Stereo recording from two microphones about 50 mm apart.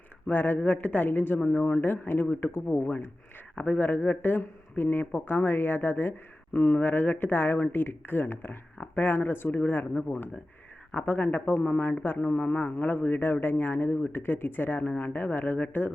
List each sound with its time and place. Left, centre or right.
0.3 s speech: left
1.0 s speech: left
2.7 s speech: left
12.4 s a man's voice: left
12.8 s speech: left